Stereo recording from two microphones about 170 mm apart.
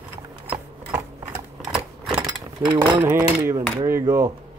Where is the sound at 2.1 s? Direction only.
20° right (ahead or behind).